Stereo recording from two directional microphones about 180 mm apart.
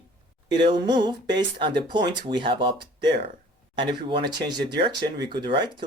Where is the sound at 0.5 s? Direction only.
25° right (ahead or behind).